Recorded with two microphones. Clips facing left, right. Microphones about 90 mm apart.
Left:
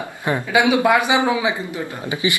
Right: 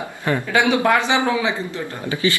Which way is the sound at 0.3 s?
10° left (ahead or behind).